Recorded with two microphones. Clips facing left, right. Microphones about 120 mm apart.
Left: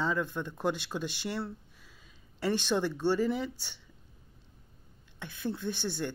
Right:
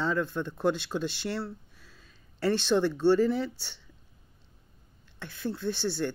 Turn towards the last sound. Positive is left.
turn(degrees=15)  # may be behind; listen again after turning